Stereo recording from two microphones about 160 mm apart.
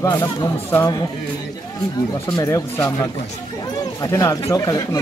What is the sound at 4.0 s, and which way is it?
Speech, 20° left (ahead or behind).